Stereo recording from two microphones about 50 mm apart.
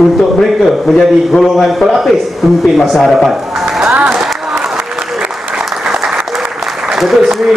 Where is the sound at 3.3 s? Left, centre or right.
Centre.